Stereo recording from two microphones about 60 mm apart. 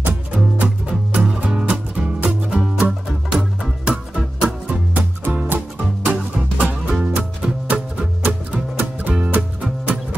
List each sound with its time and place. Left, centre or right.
0.0 s music: right
4.9 s music: right
6.1 s music: centre